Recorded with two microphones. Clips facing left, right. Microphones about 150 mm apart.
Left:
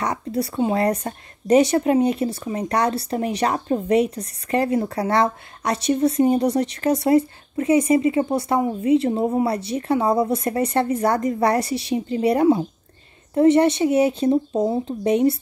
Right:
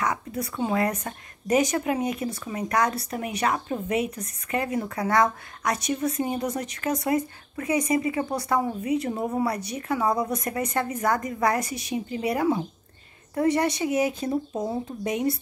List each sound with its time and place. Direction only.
0.0 s a woman's voice: 35° left (ahead or behind)